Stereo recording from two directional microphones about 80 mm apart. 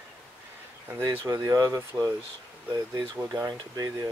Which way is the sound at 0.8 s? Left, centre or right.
Right.